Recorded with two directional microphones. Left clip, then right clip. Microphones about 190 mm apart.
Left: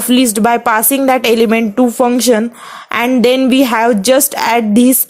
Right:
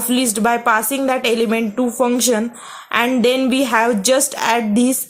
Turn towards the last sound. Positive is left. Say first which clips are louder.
# left 6 dB
turn(degrees=40)  # may be behind; listen again after turning